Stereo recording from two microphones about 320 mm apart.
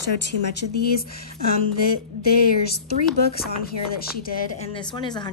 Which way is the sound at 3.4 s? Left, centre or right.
Left.